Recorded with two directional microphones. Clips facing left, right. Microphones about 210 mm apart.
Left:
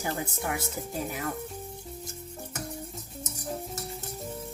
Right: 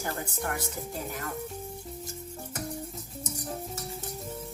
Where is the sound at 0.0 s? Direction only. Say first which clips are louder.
Left 1 dB; 5° left (ahead or behind).